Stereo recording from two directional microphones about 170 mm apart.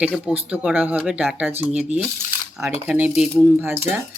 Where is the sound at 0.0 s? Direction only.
5° right (ahead or behind).